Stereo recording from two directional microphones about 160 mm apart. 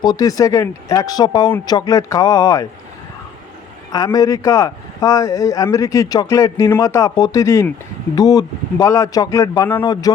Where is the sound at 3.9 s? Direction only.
25° left (ahead or behind).